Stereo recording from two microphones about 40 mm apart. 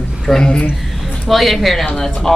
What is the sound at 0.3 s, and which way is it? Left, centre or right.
Speech, centre.